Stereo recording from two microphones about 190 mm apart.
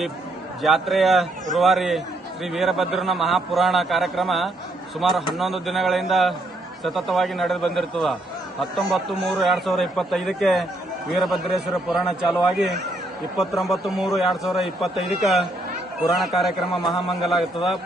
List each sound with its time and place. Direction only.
0.6 s a man's voice: centre (ahead or behind)